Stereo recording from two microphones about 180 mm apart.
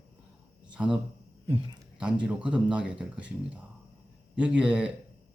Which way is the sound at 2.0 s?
5° right (ahead or behind).